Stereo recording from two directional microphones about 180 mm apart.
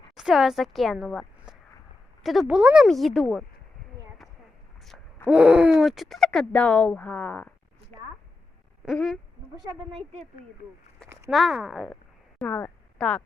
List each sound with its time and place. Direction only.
0.2 s speech: 5° right (ahead or behind)
2.2 s speech: centre (ahead or behind)
5.3 s speech: 5° right (ahead or behind); by 7.9 s 10° left (ahead or behind)
8.8 s a sound: centre (ahead or behind)
9.9 s a woman's voice: 40° right (ahead or behind)
11.3 s speech: centre (ahead or behind)
12.4 s speech: 10° left (ahead or behind)